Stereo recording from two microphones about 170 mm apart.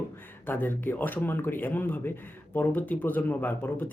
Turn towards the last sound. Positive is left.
turn(degrees=10)  # may be behind; listen again after turning